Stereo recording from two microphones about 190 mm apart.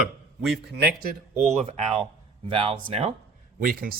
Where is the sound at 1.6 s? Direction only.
30° right (ahead or behind).